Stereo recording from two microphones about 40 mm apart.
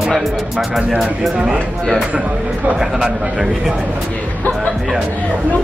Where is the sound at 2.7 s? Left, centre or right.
Centre.